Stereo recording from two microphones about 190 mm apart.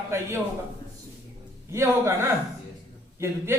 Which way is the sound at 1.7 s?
15° right (ahead or behind).